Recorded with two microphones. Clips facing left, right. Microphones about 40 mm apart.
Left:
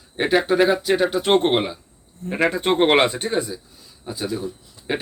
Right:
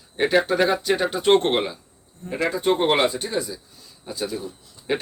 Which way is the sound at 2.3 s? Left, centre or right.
Left.